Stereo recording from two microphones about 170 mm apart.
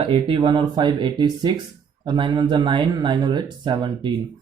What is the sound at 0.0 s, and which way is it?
A man's voice, 30° right (ahead or behind).